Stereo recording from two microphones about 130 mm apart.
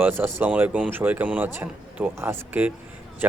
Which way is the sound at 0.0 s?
15° right (ahead or behind).